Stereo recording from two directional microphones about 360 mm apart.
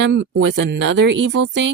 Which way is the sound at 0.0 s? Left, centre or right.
Right.